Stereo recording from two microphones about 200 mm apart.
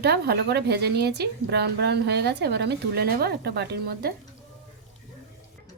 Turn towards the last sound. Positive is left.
turn(degrees=-50)  # may be behind; listen again after turning